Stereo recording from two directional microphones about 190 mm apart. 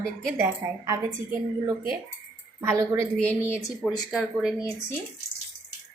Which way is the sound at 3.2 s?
10° left (ahead or behind).